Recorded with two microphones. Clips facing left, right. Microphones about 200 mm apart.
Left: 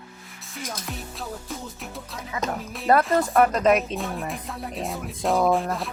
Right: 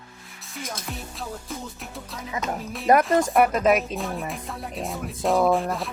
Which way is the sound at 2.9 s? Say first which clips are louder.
Right 1 dB; 15° right (ahead or behind).